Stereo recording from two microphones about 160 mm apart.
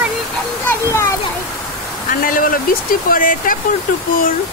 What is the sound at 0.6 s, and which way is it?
Speech, 15° left (ahead or behind).